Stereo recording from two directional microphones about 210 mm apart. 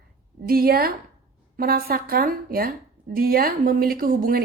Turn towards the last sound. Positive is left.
turn(degrees=-45)  # may be behind; listen again after turning